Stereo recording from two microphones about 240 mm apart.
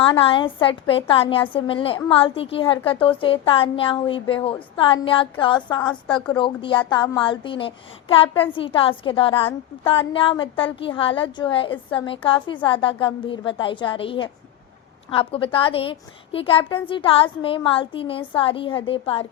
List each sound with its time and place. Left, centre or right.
0.0 s a woman's voice: left